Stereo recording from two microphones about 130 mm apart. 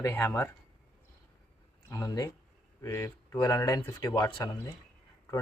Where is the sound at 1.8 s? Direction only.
25° left (ahead or behind).